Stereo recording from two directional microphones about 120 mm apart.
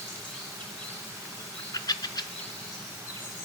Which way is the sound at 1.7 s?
35° left (ahead or behind).